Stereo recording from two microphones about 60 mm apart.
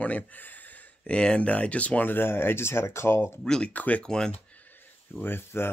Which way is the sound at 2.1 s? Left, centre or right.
Left.